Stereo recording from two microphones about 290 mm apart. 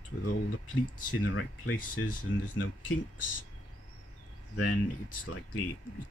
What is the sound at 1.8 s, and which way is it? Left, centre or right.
Speech, left.